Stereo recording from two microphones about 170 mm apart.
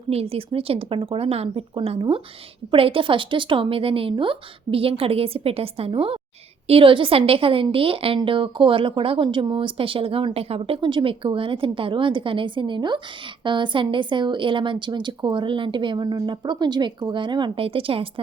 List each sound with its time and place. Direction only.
0.1 s a woman's voice: 35° right (ahead or behind)